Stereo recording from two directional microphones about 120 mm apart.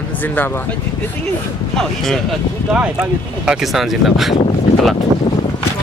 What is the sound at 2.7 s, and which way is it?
Speech, 10° right (ahead or behind).